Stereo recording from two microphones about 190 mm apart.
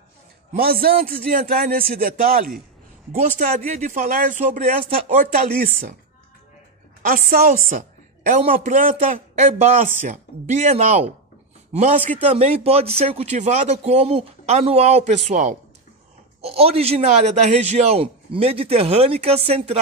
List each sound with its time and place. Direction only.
0.5 s a man's voice: 50° right (ahead or behind)
3.2 s a man's voice: 35° right (ahead or behind)
7.1 s a man's voice: 50° right (ahead or behind)
8.3 s a man's voice: 35° right (ahead or behind)